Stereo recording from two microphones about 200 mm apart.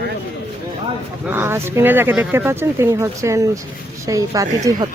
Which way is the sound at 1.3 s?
10° right (ahead or behind).